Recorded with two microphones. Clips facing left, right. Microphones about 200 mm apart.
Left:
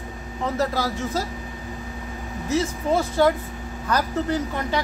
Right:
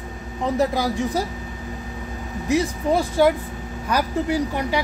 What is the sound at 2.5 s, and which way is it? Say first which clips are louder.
Speech: right 2 dB; 15° right (ahead or behind).